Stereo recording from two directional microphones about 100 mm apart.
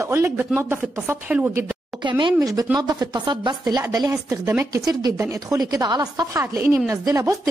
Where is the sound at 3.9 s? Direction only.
35° right (ahead or behind).